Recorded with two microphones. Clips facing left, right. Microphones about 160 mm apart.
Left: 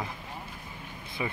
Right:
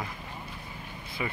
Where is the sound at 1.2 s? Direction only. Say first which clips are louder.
Left 1 dB; 20° left (ahead or behind).